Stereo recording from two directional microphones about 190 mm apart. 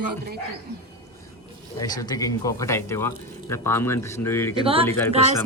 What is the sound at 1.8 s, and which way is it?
Speech, 20° left (ahead or behind).